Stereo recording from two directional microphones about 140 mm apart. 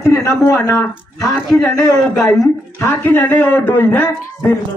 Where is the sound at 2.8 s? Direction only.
15° left (ahead or behind).